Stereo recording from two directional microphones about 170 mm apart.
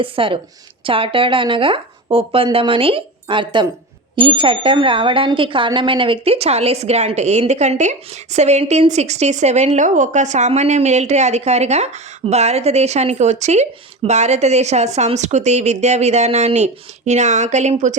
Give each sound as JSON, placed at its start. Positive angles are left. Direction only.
{"t": 0.0, "sound": "speech", "side_deg": -30}